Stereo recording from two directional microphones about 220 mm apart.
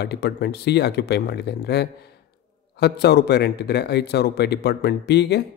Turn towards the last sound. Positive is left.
turn(degrees=50)  # may be behind; listen again after turning